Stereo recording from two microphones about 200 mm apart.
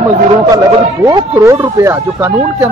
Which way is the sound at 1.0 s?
15° right (ahead or behind).